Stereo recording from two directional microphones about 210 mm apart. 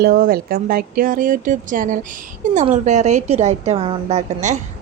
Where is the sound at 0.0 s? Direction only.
45° right (ahead or behind).